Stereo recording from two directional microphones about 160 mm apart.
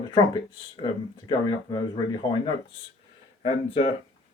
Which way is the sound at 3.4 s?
40° left (ahead or behind).